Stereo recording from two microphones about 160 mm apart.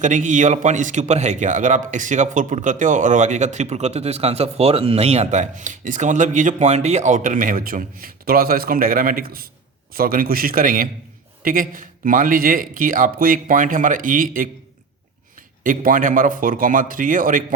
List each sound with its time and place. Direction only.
0.0 s a man's voice: 50° right (ahead or behind)